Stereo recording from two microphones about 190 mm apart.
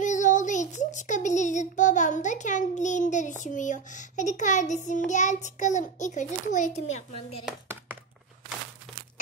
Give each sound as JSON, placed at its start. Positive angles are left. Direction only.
{"t": 0.0, "sound": "child singing", "side_deg": 40}